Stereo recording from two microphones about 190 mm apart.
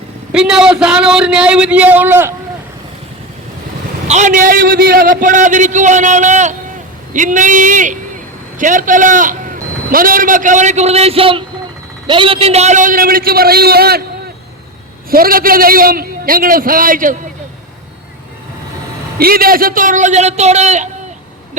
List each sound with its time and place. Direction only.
0.3 s a man's voice: 5° right (ahead or behind)
4.1 s a man's voice: 40° right (ahead or behind)
15.1 s a man's voice: 50° right (ahead or behind)
19.2 s a man's voice: 50° right (ahead or behind)